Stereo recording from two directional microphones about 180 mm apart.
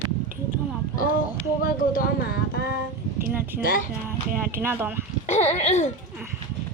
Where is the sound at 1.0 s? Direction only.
50° left (ahead or behind).